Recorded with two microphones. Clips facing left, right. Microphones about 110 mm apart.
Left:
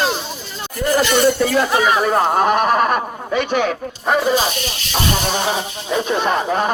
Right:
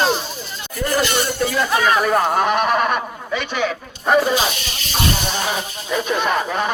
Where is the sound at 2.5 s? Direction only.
40° left (ahead or behind).